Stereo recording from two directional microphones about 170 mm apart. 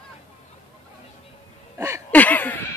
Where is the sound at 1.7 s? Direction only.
15° right (ahead or behind).